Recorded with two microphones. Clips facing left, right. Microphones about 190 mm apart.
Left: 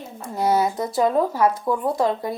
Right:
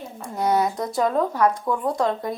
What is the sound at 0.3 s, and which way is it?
Speech, 5° left (ahead or behind).